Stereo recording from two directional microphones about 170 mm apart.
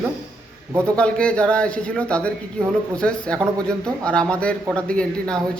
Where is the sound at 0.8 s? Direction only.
5° left (ahead or behind).